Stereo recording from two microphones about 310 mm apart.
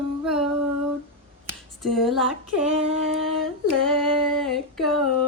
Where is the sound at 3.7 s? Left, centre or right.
Centre.